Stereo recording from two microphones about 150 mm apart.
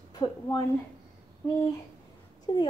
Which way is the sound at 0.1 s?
25° left (ahead or behind).